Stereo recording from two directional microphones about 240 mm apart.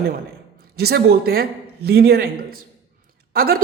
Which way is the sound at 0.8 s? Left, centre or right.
Right.